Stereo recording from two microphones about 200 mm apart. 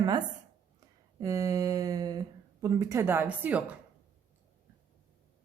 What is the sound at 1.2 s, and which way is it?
A woman's voice, 15° right (ahead or behind).